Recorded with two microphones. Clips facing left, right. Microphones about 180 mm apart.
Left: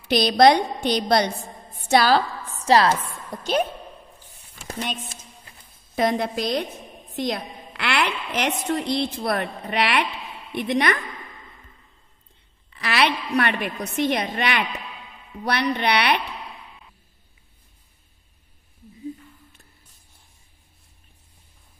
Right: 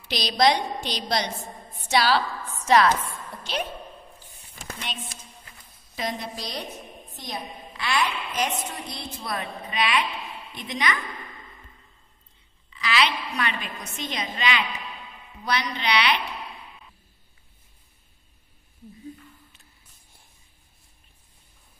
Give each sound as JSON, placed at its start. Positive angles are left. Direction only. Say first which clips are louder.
{"t": 0.1, "sound": "a woman's voice", "louder": "left 6 dB", "side_deg": 55}
{"t": 2.5, "sound": "chopping", "louder": "left 2 dB", "side_deg": 35}
{"t": 4.6, "sound": "a sound", "louder": "left 7 dB", "side_deg": 40}
{"t": 5.9, "sound": "a woman's voice", "louder": "left 9 dB", "side_deg": 60}
{"t": 7.2, "sound": "a woman's voice", "louder": "left 9 dB", "side_deg": 70}
{"t": 12.6, "sound": "a sound", "louder": "left 3 dB", "side_deg": 60}
{"t": 13.4, "sound": "a woman's voice", "louder": "left 8 dB", "side_deg": 60}